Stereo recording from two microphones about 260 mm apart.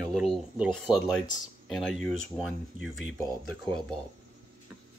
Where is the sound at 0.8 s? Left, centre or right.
Centre.